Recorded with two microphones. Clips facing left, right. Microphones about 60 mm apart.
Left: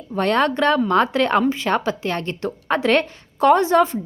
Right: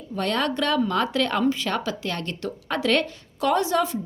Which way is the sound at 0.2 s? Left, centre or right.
Left.